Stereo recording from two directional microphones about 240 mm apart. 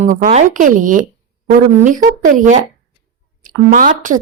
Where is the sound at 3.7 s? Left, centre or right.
Right.